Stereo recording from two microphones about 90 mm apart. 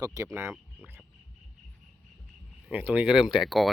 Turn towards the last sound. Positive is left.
turn(degrees=0)  # may be behind; listen again after turning